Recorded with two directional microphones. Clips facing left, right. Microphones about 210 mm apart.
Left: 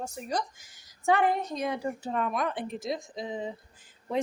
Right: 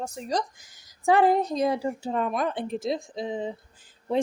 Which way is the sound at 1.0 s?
35° right (ahead or behind).